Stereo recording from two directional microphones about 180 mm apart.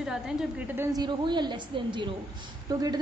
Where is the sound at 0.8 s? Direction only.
20° right (ahead or behind).